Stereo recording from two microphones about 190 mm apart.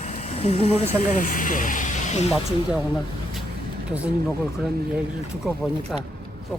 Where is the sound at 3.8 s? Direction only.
5° right (ahead or behind).